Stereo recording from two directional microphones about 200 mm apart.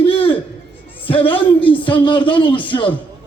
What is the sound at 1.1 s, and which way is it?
A man's voice, 25° left (ahead or behind).